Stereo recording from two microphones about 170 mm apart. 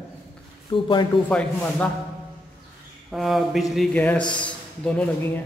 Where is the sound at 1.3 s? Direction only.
10° left (ahead or behind).